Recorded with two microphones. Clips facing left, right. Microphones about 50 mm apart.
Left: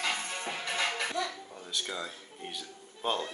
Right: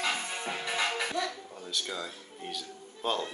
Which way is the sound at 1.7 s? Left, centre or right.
Centre.